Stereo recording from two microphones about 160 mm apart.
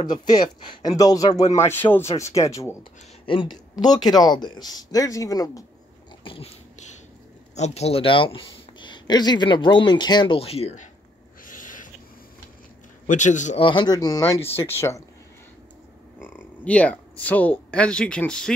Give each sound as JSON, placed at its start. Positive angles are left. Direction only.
{"t": 0.0, "sound": "speech", "side_deg": 25}
{"t": 3.3, "sound": "speech", "side_deg": 30}
{"t": 6.2, "sound": "dog", "side_deg": 35}
{"t": 7.5, "sound": "speech", "side_deg": 45}
{"t": 11.4, "sound": "owl", "side_deg": 55}
{"t": 13.0, "sound": "a man's voice", "side_deg": 50}
{"t": 13.6, "sound": "speech", "side_deg": 30}
{"t": 16.2, "sound": "speech", "side_deg": 15}